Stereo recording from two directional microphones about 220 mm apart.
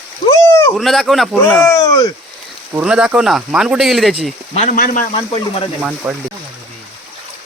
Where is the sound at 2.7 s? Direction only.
5° right (ahead or behind).